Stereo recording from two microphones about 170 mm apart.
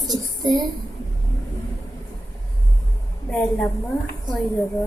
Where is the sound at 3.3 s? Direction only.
10° left (ahead or behind).